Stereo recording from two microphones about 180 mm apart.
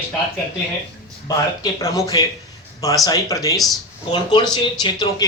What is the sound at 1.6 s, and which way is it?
Speech, 20° left (ahead or behind).